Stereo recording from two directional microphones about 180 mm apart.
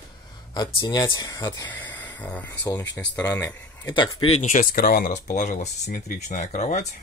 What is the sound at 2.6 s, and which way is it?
Speech, 20° left (ahead or behind).